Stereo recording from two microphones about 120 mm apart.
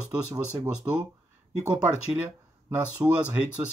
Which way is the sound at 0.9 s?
20° right (ahead or behind).